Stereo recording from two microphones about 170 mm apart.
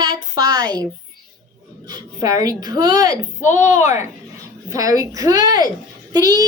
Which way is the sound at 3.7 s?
45° left (ahead or behind).